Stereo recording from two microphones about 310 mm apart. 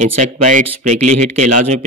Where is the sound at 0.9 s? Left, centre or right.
Right.